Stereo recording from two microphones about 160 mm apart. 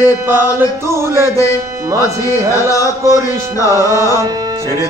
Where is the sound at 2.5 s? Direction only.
20° left (ahead or behind).